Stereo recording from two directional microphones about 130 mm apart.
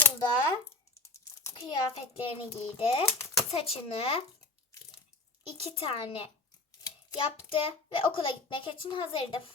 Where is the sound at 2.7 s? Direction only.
45° left (ahead or behind).